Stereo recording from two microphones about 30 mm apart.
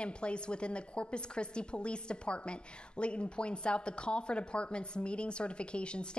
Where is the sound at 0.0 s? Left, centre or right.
Left.